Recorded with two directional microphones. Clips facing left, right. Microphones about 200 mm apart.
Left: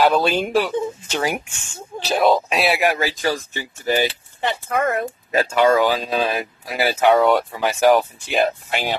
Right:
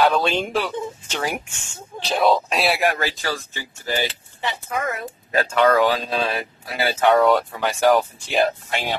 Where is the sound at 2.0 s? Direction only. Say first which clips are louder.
Left 2 dB; centre (ahead or behind).